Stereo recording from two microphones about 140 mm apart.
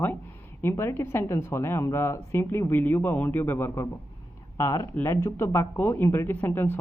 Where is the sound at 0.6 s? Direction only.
20° left (ahead or behind).